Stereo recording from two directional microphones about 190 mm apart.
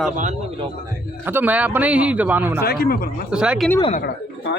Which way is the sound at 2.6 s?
55° left (ahead or behind).